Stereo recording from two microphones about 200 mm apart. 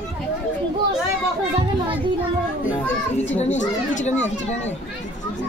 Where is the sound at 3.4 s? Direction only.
35° left (ahead or behind).